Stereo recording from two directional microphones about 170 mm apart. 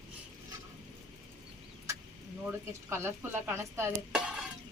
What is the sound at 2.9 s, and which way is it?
Speech, 15° right (ahead or behind).